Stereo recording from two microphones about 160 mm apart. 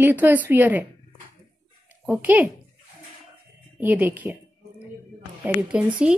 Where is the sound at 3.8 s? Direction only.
10° right (ahead or behind).